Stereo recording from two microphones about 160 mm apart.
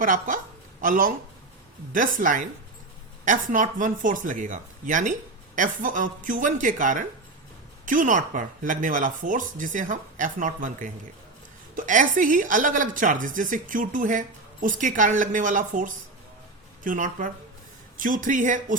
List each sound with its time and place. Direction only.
0.0 s a woman's voice: 55° right (ahead or behind)